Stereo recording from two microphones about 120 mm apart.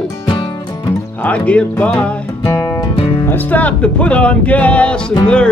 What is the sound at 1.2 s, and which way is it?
Music, 10° left (ahead or behind).